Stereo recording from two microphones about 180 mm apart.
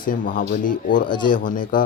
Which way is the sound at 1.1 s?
25° left (ahead or behind).